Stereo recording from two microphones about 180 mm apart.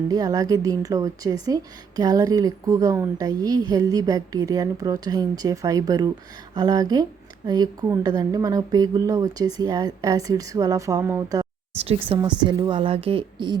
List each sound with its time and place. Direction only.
0.1 s a woman's voice: 20° right (ahead or behind)
11.9 s a woman's voice: 30° right (ahead or behind)